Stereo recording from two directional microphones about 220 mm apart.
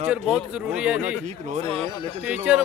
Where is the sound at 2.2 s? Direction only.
5° right (ahead or behind).